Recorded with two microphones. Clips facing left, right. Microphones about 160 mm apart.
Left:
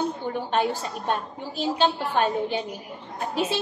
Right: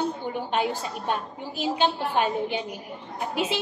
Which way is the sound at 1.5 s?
10° right (ahead or behind).